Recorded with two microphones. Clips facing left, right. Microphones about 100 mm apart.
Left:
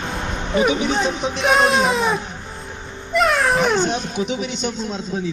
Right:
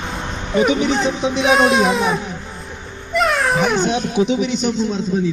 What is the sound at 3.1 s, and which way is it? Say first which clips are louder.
Cat: even; centre (ahead or behind).